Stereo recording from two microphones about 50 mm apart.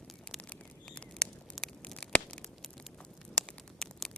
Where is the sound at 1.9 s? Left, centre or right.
Centre.